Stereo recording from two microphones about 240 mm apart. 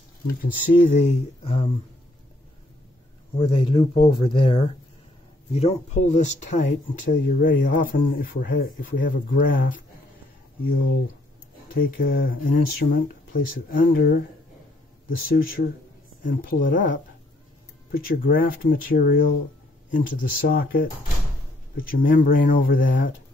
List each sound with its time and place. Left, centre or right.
0.4 s speech: left
3.3 s speech: left
11.7 s speech: left